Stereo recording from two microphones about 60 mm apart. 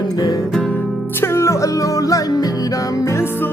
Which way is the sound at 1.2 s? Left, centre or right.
Left.